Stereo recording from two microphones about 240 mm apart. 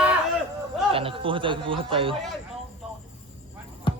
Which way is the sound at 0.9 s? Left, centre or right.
Right.